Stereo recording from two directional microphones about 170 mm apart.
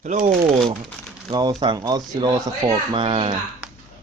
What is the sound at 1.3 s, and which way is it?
Speech, 25° right (ahead or behind).